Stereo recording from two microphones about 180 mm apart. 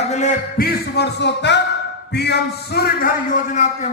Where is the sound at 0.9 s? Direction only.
70° left (ahead or behind).